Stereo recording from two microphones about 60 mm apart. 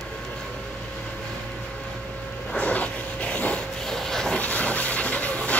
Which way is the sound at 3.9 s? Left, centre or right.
Centre.